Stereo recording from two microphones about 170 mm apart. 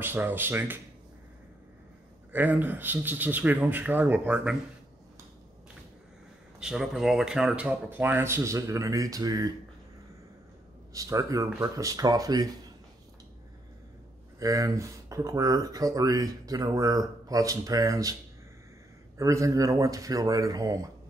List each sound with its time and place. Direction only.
0.0 s speech: 10° right (ahead or behind)
2.3 s speech: 10° right (ahead or behind)
6.6 s speech: centre (ahead or behind); by 9.5 s 20° right (ahead or behind)
10.9 s speech: 20° right (ahead or behind)
14.4 s speech: 20° right (ahead or behind)
19.1 s speech: 20° right (ahead or behind)